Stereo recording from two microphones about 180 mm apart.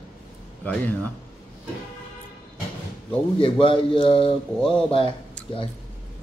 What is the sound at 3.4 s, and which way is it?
Speech, 30° left (ahead or behind).